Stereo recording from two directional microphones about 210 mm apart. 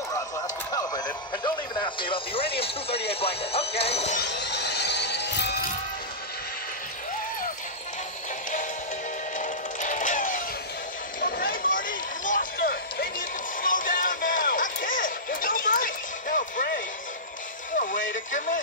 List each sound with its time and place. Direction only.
0.7 s radio: 15° left (ahead or behind)
1.3 s speech: 20° left (ahead or behind)
4.2 s music: 55° left (ahead or behind)
9.4 s music: 35° left (ahead or behind)
11.1 s run: 45° left (ahead or behind)
13.6 s music: 40° left (ahead or behind)
18.1 s speech: 40° left (ahead or behind)